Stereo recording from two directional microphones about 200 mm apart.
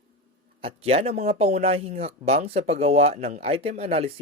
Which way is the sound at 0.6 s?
30° right (ahead or behind).